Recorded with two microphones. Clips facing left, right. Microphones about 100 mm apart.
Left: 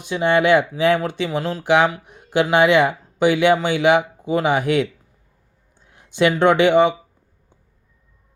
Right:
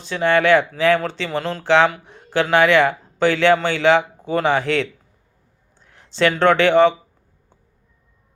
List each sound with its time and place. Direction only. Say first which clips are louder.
0.0 s speech: even; 15° left (ahead or behind)